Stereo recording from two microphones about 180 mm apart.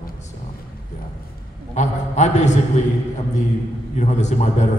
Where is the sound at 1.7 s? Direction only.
40° left (ahead or behind).